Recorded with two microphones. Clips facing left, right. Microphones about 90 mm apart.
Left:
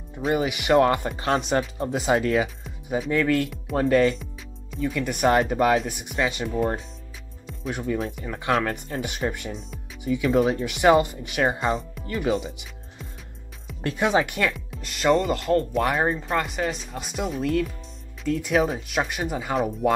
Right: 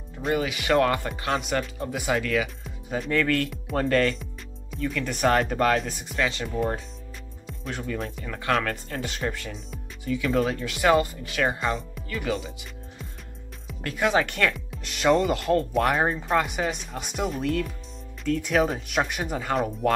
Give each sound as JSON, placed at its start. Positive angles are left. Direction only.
{"t": 0.3, "sound": "speech", "side_deg": 20}
{"t": 2.4, "sound": "speech", "side_deg": 5}
{"t": 6.4, "sound": "speech", "side_deg": 5}
{"t": 7.9, "sound": "speech", "side_deg": 15}
{"t": 12.3, "sound": "speech", "side_deg": 30}
{"t": 13.8, "sound": "speech", "side_deg": 20}
{"t": 14.5, "sound": "speech", "side_deg": 0}